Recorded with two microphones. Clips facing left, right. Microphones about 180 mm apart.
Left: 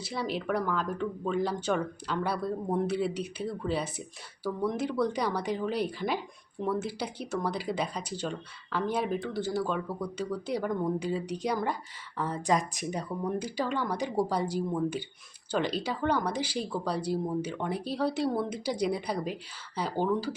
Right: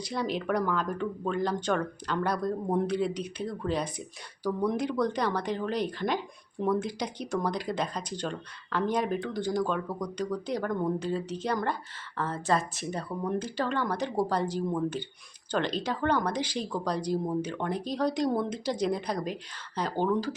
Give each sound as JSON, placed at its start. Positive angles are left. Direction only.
{"t": 0.0, "sound": "speech", "side_deg": 5}